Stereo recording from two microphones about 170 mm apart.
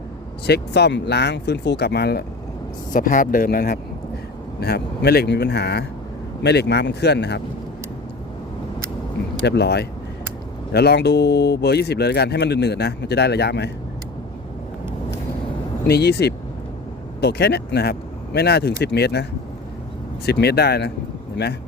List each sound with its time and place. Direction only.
0.4 s speech: 75° left (ahead or behind)
2.9 s speech: 50° left (ahead or behind); by 7.4 s 80° left
9.5 s speech: 75° left (ahead or behind)
15.9 s speech: 70° left (ahead or behind)
20.2 s speech: 70° left (ahead or behind)